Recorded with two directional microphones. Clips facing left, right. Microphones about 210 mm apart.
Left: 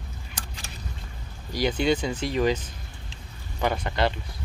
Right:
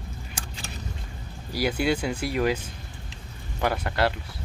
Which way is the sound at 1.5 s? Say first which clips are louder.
Left 1 dB; 5° right (ahead or behind).